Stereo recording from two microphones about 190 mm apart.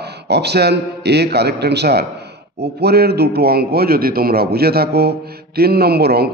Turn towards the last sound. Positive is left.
turn(degrees=-55)  # may be behind; listen again after turning